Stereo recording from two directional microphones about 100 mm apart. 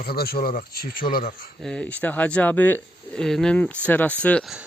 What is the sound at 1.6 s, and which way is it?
Speech, 10° left (ahead or behind).